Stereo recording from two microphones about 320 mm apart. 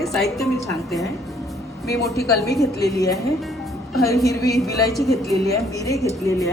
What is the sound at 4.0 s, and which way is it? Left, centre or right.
A woman's voice, centre.